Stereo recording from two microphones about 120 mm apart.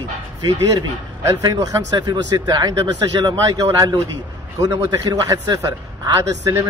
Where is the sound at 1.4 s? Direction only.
30° right (ahead or behind).